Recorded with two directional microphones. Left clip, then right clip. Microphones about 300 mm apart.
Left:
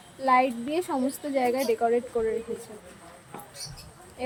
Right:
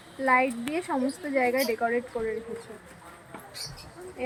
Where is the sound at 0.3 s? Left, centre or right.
Centre.